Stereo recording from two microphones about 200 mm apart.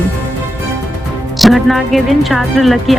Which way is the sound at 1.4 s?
Centre (ahead or behind).